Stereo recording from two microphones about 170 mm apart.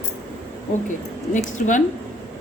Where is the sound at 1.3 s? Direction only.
50° left (ahead or behind).